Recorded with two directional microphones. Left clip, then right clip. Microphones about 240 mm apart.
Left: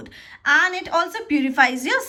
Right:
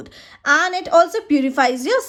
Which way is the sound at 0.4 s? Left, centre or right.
Centre.